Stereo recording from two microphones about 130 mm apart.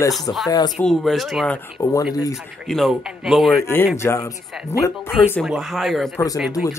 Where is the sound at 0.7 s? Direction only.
Centre (ahead or behind).